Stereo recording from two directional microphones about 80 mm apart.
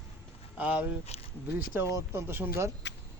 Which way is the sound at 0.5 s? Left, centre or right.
Centre.